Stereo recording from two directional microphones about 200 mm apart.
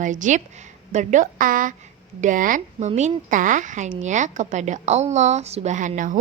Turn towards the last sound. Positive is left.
turn(degrees=-40)  # may be behind; listen again after turning